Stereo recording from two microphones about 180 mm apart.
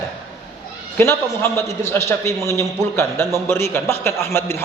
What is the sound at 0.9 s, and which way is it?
A man's voice, 15° left (ahead or behind).